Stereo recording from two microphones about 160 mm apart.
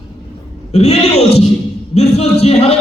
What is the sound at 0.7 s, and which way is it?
A man's voice, 40° left (ahead or behind).